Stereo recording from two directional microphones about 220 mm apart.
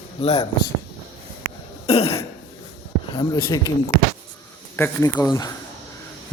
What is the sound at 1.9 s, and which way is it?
Throat clearing, 25° left (ahead or behind).